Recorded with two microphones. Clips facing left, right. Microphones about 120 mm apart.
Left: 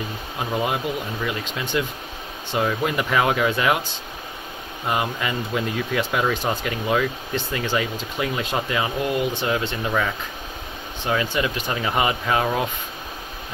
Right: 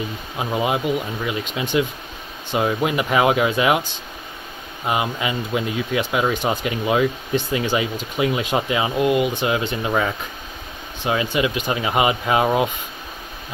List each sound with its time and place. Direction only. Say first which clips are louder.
0.4 s speech: right 3 dB; 15° right (ahead or behind)
4.8 s speech: right 2 dB; 15° right (ahead or behind)